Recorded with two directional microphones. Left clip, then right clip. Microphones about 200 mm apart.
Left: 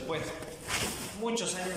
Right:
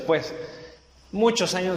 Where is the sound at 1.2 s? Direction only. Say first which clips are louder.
Right 14 dB; 55° right (ahead or behind).